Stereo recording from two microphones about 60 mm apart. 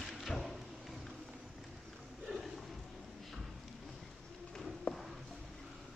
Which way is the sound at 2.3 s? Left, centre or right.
Centre.